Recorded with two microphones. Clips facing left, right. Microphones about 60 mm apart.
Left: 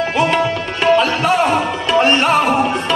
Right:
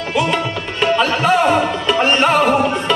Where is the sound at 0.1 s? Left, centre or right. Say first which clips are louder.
Right 1 dB; left.